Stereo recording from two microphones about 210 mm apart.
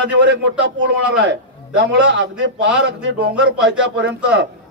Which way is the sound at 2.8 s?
60° right (ahead or behind).